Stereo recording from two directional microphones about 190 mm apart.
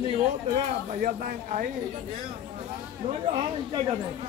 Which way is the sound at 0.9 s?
45° right (ahead or behind).